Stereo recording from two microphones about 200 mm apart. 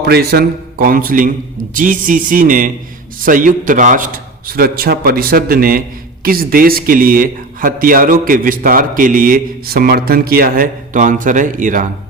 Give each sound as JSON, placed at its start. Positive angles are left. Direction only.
{"t": 0.0, "sound": "a man's voice", "side_deg": -55}